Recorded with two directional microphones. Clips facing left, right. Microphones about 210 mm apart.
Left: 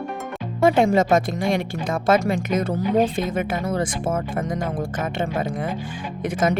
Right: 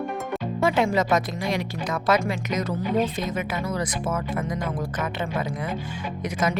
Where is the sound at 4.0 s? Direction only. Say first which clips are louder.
Left 3 dB; 30° left (ahead or behind).